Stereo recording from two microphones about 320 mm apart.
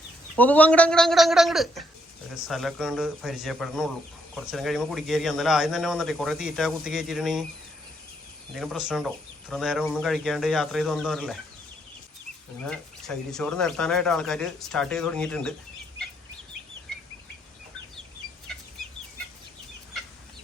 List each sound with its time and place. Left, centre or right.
0.3 s speech: centre
8.5 s speech: centre
12.6 s speech: centre